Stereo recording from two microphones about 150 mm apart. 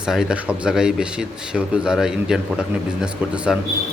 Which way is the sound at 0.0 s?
5° right (ahead or behind).